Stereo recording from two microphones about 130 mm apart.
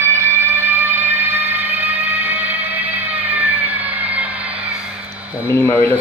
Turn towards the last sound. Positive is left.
turn(degrees=20)  # may be behind; listen again after turning